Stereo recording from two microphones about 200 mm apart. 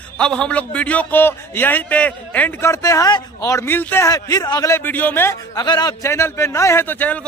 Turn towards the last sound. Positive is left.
turn(degrees=10)  # may be behind; listen again after turning